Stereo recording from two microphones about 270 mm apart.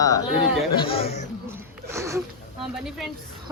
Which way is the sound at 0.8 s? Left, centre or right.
Left.